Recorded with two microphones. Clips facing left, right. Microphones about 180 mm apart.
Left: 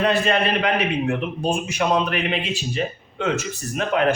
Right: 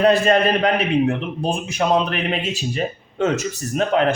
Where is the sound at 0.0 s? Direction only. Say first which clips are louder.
Right 5 dB; 40° right (ahead or behind).